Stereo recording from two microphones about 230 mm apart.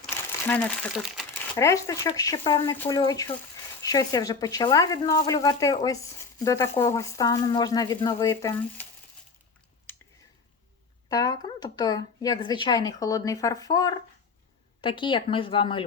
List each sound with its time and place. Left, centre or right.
0.0 s speech: centre
1.5 s speech: centre
11.1 s a woman's voice: centre